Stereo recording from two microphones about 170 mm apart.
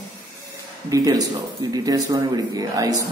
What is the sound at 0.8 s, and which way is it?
Speech, 20° right (ahead or behind).